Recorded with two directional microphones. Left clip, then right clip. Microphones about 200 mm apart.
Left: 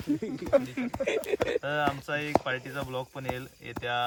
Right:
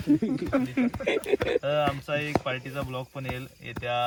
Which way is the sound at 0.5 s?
50° left (ahead or behind).